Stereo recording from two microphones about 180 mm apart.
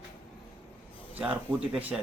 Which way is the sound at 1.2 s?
5° right (ahead or behind).